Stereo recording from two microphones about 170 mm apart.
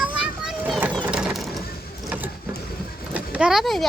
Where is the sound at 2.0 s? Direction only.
10° right (ahead or behind).